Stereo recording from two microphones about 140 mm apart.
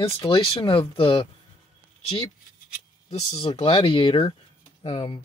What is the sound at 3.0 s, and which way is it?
Speech, 50° left (ahead or behind).